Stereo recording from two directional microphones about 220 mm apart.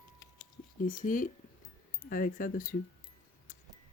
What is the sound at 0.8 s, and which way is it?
Speech, 40° left (ahead or behind).